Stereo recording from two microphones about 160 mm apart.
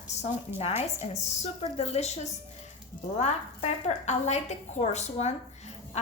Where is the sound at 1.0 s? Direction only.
40° left (ahead or behind).